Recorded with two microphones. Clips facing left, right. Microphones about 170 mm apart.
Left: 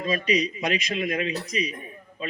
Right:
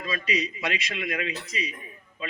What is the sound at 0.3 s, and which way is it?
A man's voice, 30° left (ahead or behind).